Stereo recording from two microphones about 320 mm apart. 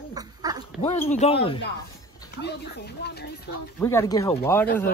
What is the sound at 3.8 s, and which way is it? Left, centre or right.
Speech, centre.